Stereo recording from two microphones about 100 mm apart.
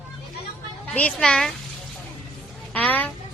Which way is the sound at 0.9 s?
10° left (ahead or behind).